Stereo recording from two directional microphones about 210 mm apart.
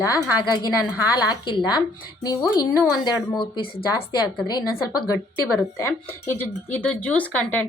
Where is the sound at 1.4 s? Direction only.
20° left (ahead or behind).